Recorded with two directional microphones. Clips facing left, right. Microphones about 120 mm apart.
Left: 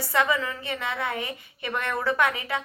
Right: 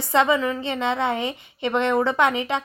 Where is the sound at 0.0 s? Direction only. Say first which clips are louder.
Right 5 dB; 25° right (ahead or behind).